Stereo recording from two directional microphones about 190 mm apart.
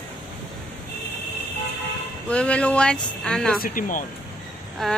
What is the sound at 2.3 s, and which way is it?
Speech, 5° left (ahead or behind).